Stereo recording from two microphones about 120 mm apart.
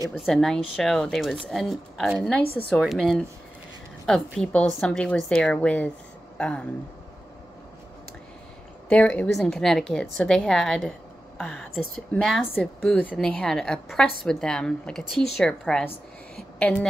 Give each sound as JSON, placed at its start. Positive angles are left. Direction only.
{"t": 0.1, "sound": "a woman's voice", "side_deg": 0}
{"t": 8.8, "sound": "a woman's voice", "side_deg": 10}
{"t": 13.0, "sound": "a woman's voice", "side_deg": 10}